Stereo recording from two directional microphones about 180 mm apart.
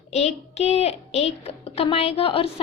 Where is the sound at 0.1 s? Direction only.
35° left (ahead or behind).